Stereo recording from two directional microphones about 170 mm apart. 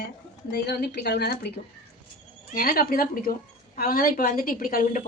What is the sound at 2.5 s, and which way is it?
Speech, 60° left (ahead or behind).